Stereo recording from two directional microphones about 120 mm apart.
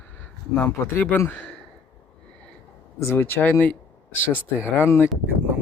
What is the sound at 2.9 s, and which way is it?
Speech, 20° left (ahead or behind).